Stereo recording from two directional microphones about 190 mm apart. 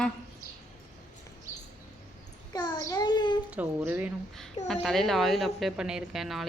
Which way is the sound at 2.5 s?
20° left (ahead or behind).